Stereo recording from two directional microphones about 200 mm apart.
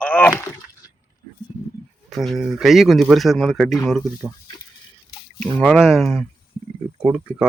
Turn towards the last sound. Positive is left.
turn(degrees=-5)  # may be behind; listen again after turning